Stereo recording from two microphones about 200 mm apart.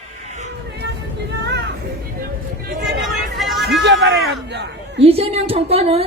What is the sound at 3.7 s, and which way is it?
Hubbub, 60° right (ahead or behind).